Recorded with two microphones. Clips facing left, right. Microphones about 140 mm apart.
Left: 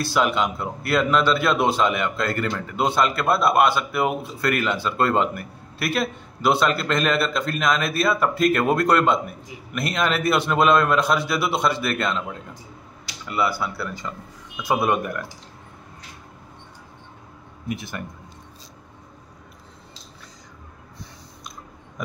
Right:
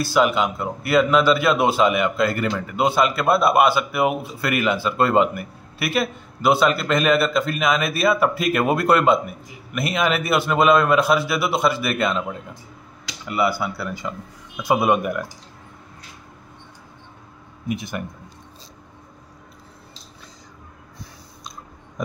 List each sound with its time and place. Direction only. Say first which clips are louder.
0.0 s speech: right 3 dB; centre (ahead or behind)
17.6 s speech: right 3 dB; 15° right (ahead or behind)